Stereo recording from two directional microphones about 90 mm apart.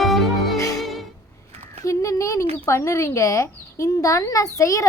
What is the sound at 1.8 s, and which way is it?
A woman's voice, 35° left (ahead or behind).